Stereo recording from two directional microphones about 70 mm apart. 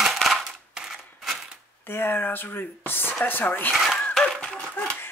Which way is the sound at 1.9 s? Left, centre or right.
Left.